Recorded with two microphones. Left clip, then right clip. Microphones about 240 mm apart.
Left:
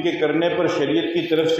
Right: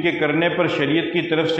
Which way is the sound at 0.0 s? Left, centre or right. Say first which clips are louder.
Right 1 dB; right.